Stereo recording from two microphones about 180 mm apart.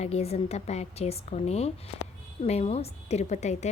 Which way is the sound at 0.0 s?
35° left (ahead or behind).